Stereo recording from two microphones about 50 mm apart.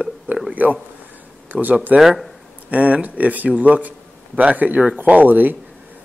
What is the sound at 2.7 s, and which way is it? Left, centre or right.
Speech, right.